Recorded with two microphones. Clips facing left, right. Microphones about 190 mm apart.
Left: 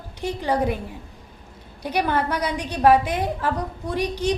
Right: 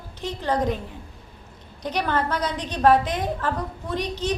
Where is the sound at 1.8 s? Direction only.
10° left (ahead or behind).